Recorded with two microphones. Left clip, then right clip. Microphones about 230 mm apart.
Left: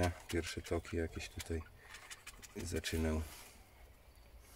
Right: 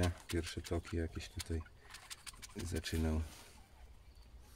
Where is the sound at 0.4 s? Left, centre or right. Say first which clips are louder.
Left 2 dB; centre.